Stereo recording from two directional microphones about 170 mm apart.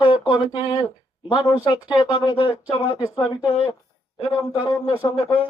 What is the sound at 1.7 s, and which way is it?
Speech, 25° left (ahead or behind).